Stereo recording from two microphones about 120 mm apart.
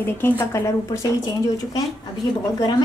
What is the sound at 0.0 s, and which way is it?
A woman's voice, 20° left (ahead or behind).